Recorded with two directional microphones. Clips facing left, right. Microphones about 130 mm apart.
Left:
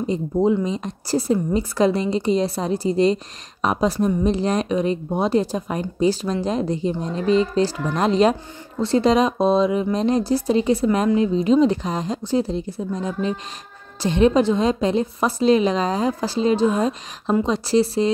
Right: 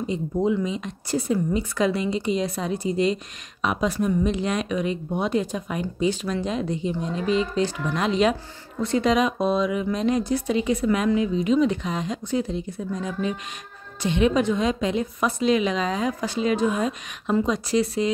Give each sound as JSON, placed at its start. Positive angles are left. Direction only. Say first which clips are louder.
{"t": 0.0, "sound": "speech", "louder": "left 4 dB", "side_deg": 35}